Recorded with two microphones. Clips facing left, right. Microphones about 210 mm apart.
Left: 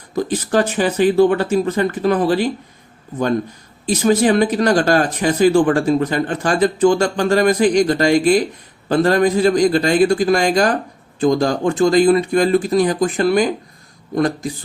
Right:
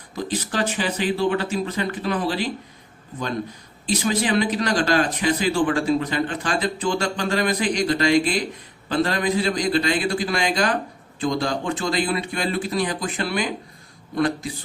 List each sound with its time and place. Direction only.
0.3 s speech: 45° left (ahead or behind)
3.8 s speech: 45° left (ahead or behind)